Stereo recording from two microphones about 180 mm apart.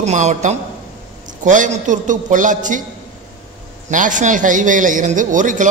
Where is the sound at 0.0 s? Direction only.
40° right (ahead or behind).